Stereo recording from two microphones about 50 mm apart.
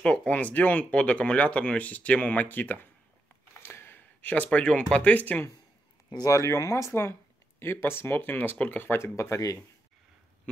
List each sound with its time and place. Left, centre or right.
0.0 s speech: left
3.6 s gasp: left
4.3 s speech: left
5.2 s speech: left
6.3 s speech: left
6.9 s speech: left
8.9 s speech: left